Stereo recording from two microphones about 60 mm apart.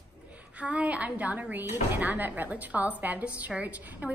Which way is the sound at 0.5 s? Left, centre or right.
Right.